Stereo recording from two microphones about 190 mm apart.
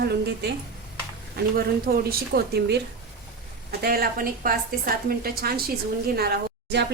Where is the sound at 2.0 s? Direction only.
55° right (ahead or behind).